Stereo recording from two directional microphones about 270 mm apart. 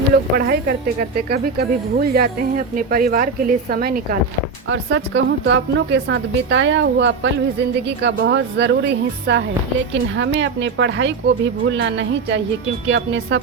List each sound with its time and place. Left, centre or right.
0.1 s a woman's voice: right
4.7 s a woman's voice: right